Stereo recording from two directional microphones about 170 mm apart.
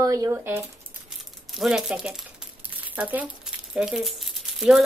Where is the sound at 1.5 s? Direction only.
Centre (ahead or behind).